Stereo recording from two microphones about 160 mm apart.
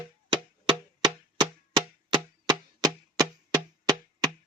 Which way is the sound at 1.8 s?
25° right (ahead or behind).